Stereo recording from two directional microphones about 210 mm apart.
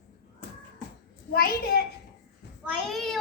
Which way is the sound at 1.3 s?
50° left (ahead or behind).